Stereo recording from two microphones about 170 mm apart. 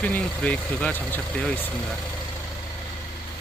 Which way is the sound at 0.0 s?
10° left (ahead or behind).